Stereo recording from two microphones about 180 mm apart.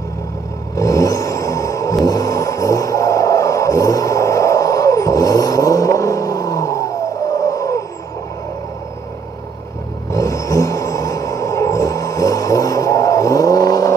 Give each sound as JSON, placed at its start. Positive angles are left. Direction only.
{"t": 0.7, "sound": "vehicle", "side_deg": 20}
{"t": 10.1, "sound": "vehicle", "side_deg": 20}